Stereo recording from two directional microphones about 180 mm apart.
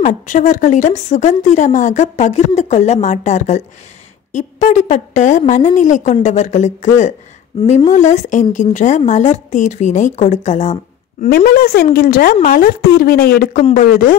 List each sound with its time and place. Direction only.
0.0 s speech: 45° left (ahead or behind)
7.9 s speech: 40° left (ahead or behind)
11.2 s speech: 55° left (ahead or behind)